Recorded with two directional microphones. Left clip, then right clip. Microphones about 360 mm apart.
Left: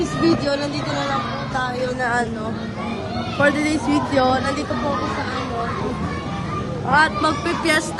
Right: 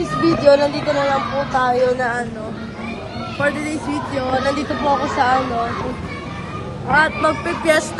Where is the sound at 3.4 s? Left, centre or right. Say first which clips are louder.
Left 2 dB; centre.